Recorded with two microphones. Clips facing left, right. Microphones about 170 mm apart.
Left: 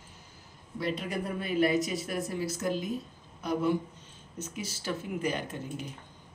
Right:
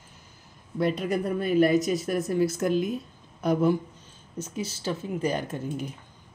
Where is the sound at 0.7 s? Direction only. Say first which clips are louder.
Right 7 dB; 50° right (ahead or behind).